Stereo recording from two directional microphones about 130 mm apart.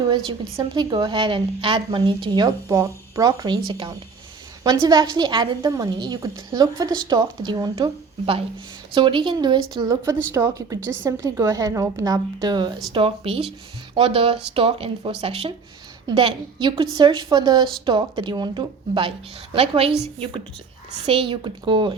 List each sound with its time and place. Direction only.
0.5 s a woman's voice: 30° right (ahead or behind)
9.0 s a woman's voice: 40° right (ahead or behind)